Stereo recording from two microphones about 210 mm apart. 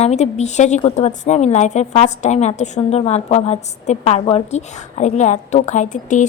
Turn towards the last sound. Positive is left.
turn(degrees=35)  # may be behind; listen again after turning